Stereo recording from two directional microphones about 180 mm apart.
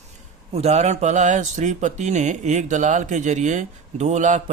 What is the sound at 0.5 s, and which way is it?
Speech, 40° right (ahead or behind).